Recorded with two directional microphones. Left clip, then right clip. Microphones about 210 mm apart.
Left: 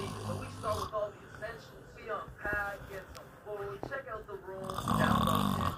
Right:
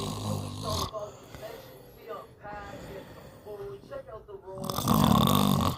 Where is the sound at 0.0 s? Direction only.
55° right (ahead or behind).